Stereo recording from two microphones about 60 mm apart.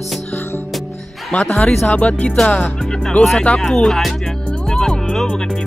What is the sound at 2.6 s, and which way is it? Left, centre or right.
Speech, centre.